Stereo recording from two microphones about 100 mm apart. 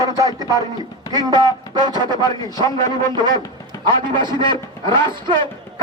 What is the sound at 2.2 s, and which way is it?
Speech, 40° left (ahead or behind).